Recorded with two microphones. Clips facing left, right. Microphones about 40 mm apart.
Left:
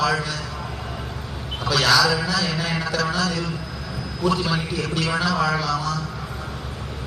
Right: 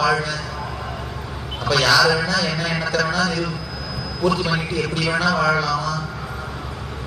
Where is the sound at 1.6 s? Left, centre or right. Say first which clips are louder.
Right 2 dB; right.